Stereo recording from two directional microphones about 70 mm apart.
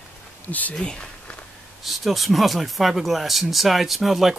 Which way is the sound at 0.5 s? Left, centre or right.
Left.